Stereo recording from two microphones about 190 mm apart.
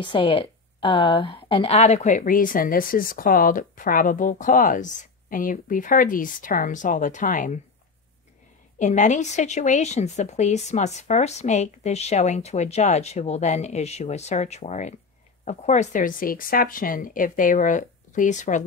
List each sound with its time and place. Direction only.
0.0 s speech: 25° left (ahead or behind); by 7.6 s 40° left (ahead or behind)
8.7 s a woman's voice: 40° left (ahead or behind)